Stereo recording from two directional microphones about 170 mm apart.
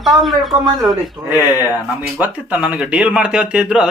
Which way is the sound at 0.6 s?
20° right (ahead or behind).